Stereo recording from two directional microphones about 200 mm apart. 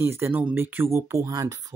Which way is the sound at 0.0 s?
10° right (ahead or behind).